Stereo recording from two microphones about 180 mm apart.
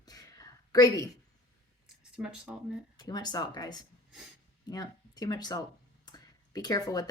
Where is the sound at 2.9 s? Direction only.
20° left (ahead or behind).